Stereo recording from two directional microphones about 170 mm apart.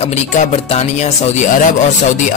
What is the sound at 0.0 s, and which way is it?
Speech, 45° left (ahead or behind).